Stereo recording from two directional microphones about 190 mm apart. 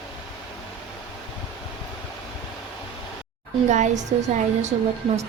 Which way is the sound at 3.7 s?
40° right (ahead or behind).